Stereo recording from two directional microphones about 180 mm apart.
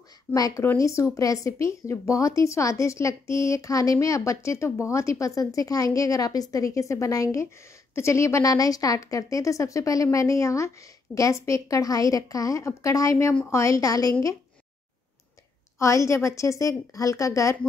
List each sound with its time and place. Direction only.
0.3 s speech: 15° left (ahead or behind)
15.8 s speech: 15° left (ahead or behind)